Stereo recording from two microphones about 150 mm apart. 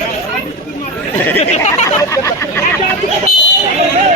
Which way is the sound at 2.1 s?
20° left (ahead or behind).